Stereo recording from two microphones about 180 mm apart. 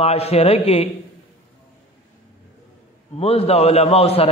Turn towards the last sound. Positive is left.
turn(degrees=35)  # may be behind; listen again after turning